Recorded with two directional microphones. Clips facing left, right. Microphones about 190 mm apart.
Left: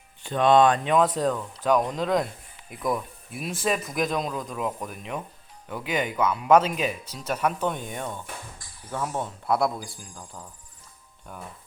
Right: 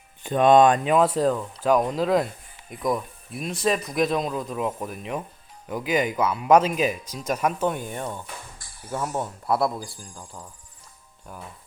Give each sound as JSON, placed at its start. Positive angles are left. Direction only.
{"t": 0.2, "sound": "speech", "side_deg": -15}
{"t": 0.9, "sound": "speech", "side_deg": -5}
{"t": 8.5, "sound": "a sound", "side_deg": -90}
{"t": 8.9, "sound": "speech", "side_deg": -5}
{"t": 11.3, "sound": "speech", "side_deg": 0}